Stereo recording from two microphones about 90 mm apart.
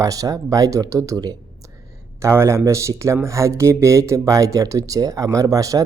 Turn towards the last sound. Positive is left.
turn(degrees=-40)  # may be behind; listen again after turning